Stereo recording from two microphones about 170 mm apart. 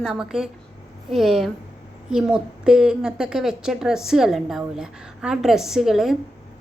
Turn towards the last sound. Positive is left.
turn(degrees=0)  # may be behind; listen again after turning